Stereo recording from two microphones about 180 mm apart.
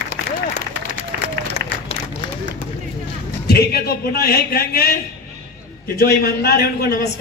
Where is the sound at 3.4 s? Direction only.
60° left (ahead or behind).